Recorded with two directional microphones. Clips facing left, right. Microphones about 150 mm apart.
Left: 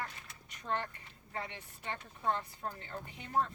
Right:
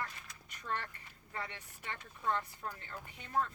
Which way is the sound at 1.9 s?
35° left (ahead or behind).